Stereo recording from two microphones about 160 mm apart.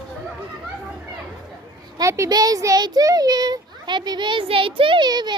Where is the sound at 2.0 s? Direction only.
20° right (ahead or behind).